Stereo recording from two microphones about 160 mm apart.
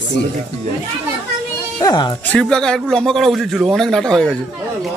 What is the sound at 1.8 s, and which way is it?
Speech, 25° left (ahead or behind).